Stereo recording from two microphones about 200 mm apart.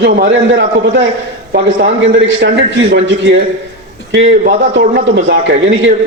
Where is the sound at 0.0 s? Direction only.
60° right (ahead or behind).